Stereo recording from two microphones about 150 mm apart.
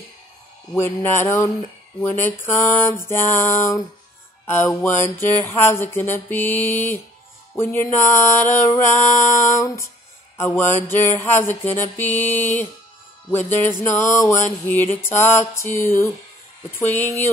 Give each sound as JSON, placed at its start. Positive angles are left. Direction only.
{"t": 0.7, "sound": "mantra", "side_deg": 15}